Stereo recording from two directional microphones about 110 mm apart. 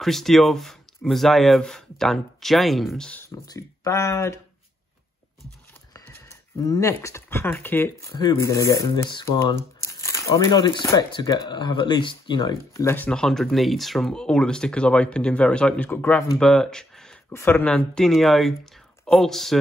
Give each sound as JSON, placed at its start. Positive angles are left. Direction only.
{"t": 0.0, "sound": "speech", "side_deg": 0}
{"t": 3.3, "sound": "speech", "side_deg": 30}
{"t": 5.9, "sound": "speech", "side_deg": 35}
{"t": 12.7, "sound": "speech", "side_deg": 20}
{"t": 13.1, "sound": "speech", "side_deg": 5}
{"t": 16.3, "sound": "speech", "side_deg": 5}
{"t": 17.3, "sound": "speech", "side_deg": 20}